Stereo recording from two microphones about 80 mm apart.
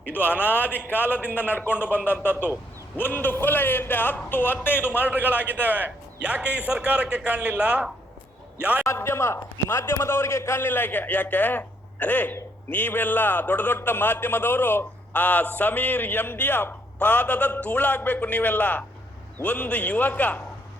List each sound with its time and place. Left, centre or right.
0.1 s a man's voice: left
3.0 s a man's voice: left
5.0 s a man's voice: right
8.8 s a man's voice: left